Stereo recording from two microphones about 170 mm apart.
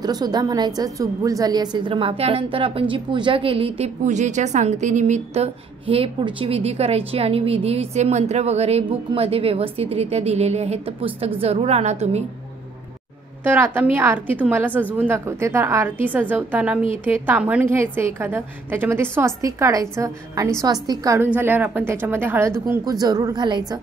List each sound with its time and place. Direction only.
0.0 s a woman's voice: 25° right (ahead or behind); by 12.2 s 40° right (ahead or behind)
13.4 s a woman's voice: 10° right (ahead or behind)